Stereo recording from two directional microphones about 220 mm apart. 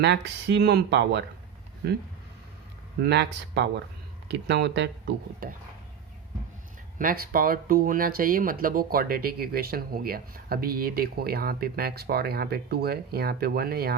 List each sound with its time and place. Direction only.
0.0 s speech: 50° right (ahead or behind)
3.0 s speech: 50° right (ahead or behind)
7.0 s speech: 40° right (ahead or behind)